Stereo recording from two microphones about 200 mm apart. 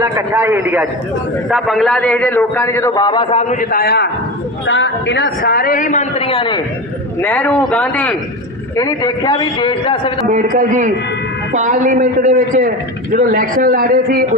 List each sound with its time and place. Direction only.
0.0 s a man's voice: 10° right (ahead or behind); by 4.1 s 50° left (ahead or behind)
4.6 s a woman's voice: 65° left (ahead or behind); by 6.6 s 25° left (ahead or behind)
7.2 s a man's voice: 10° left (ahead or behind)
8.7 s a man's voice: 20° left (ahead or behind)
10.2 s a man's voice: 40° right (ahead or behind)